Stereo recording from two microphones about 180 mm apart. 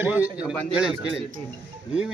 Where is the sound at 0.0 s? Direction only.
10° right (ahead or behind).